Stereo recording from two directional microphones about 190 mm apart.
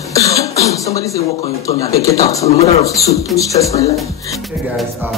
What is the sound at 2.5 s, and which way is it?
Speech, 35° left (ahead or behind).